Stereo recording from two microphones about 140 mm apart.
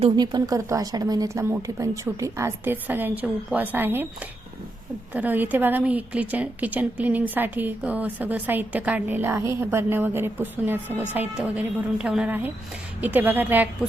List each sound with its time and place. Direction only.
0.2 s speech: 30° right (ahead or behind)
5.1 s a woman's voice: 10° right (ahead or behind)